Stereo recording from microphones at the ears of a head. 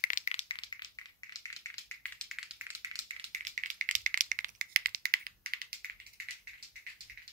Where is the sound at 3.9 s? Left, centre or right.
Right.